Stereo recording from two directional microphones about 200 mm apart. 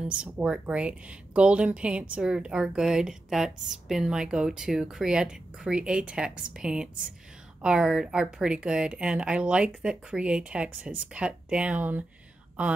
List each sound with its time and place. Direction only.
0.2 s speech: 5° right (ahead or behind)